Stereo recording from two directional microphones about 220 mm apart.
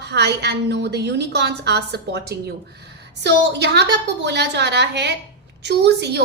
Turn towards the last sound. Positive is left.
turn(degrees=-50)  # may be behind; listen again after turning